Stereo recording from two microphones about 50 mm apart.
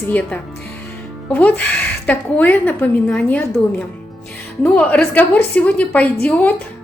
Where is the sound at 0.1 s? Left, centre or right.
Left.